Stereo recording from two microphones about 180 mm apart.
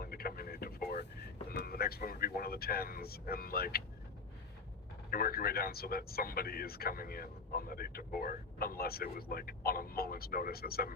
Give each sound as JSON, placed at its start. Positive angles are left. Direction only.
{"t": 0.0, "sound": "vehicle", "side_deg": 55}
{"t": 1.5, "sound": "speech", "side_deg": 60}
{"t": 5.1, "sound": "speech", "side_deg": 55}